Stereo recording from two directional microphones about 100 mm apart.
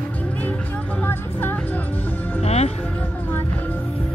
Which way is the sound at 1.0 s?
20° left (ahead or behind).